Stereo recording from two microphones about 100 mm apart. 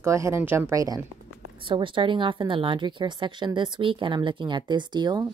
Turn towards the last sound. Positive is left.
turn(degrees=-45)  # may be behind; listen again after turning